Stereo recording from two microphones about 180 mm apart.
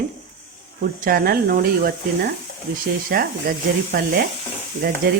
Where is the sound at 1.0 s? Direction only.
55° right (ahead or behind).